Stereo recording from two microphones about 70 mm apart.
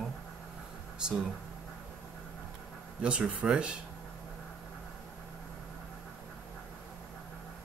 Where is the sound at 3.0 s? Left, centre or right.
Centre.